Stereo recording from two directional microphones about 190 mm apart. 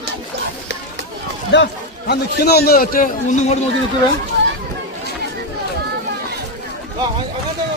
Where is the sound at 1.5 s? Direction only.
70° left (ahead or behind).